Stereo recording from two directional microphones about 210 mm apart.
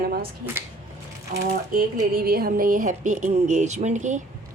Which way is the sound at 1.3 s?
45° right (ahead or behind).